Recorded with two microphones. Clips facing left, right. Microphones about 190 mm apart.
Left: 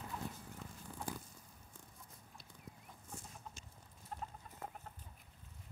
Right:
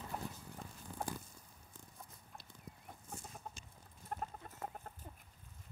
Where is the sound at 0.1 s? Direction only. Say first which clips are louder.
Right 1 dB; 55° right (ahead or behind).